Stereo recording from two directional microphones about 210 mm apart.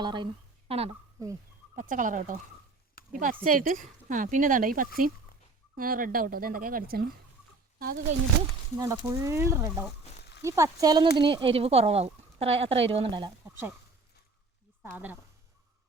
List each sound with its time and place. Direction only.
0.0 s speech: 20° right (ahead or behind)
1.7 s speech: 40° right (ahead or behind)
8.8 s speech: 15° right (ahead or behind)
14.8 s speech: 10° right (ahead or behind)